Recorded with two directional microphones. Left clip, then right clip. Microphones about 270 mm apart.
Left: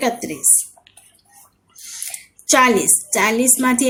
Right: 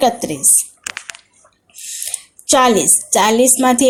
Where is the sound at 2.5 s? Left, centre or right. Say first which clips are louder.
Right 2 dB; centre.